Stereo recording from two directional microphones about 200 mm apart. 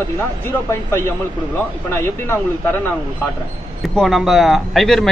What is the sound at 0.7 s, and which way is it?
Speech, 10° left (ahead or behind).